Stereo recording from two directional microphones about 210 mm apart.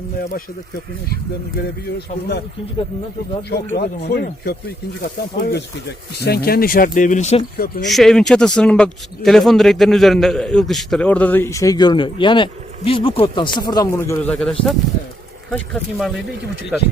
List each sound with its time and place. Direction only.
3.5 s speech: 50° left (ahead or behind); by 7.4 s 35° left (ahead or behind)
7.9 s speech: centre (ahead or behind)